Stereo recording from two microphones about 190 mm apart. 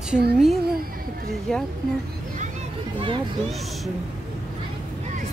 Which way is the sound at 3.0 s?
25° right (ahead or behind).